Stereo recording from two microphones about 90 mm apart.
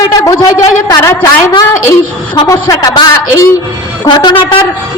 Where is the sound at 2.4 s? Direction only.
40° left (ahead or behind).